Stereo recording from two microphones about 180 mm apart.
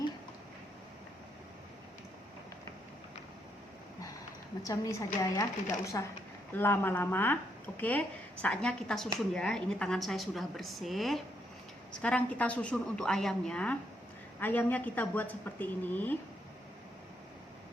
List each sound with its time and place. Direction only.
4.6 s a woman's voice: 20° left (ahead or behind)